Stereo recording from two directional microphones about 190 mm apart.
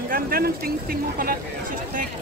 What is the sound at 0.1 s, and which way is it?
Speech, 50° right (ahead or behind).